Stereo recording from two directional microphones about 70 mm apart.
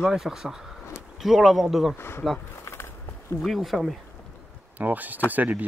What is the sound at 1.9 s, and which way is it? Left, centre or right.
Speech, left.